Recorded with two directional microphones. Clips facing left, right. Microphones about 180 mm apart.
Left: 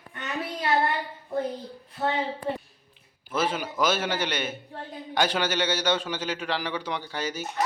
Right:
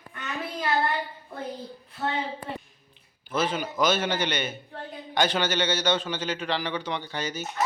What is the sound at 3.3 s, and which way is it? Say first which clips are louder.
A man's voice: even; 10° left (ahead or behind).